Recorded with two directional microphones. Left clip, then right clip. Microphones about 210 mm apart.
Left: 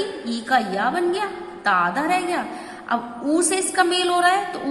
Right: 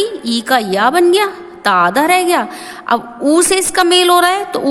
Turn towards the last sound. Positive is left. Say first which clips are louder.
# right 7 dB
turn(degrees=-55)  # may be behind; listen again after turning